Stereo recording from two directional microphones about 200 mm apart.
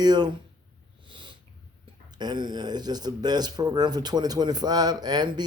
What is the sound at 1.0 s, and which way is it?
Cat, 25° right (ahead or behind).